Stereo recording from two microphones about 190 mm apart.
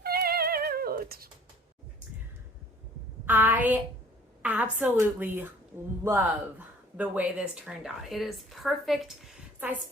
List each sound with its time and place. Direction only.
0.0 s music: 55° right (ahead or behind)
3.2 s a woman's voice: 10° right (ahead or behind)